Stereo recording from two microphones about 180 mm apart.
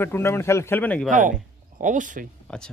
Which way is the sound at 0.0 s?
15° left (ahead or behind).